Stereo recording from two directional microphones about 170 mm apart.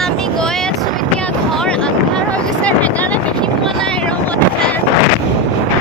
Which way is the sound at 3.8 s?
5° left (ahead or behind).